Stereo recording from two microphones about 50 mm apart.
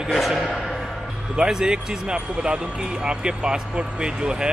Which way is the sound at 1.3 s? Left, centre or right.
Centre.